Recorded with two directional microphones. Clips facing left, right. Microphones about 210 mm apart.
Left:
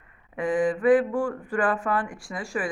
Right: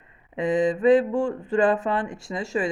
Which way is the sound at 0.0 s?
25° right (ahead or behind).